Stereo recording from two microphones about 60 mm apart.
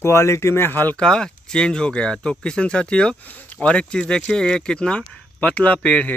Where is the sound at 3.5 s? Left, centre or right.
Centre.